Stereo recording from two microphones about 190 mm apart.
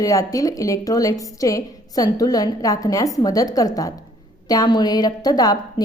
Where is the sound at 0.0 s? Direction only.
15° left (ahead or behind).